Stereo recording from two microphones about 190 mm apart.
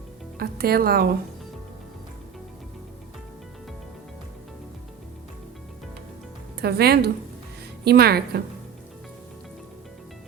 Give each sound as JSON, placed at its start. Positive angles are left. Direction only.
{"t": 0.3, "sound": "speech", "side_deg": -55}
{"t": 6.6, "sound": "speech", "side_deg": -60}